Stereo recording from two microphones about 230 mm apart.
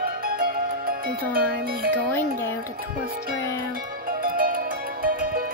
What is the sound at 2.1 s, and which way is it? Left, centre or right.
Speech, centre.